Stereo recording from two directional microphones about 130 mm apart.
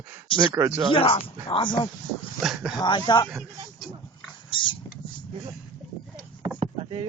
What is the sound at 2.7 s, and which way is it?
Speech, 35° left (ahead or behind).